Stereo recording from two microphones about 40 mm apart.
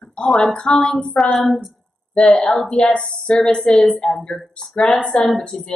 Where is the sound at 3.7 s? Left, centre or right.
Left.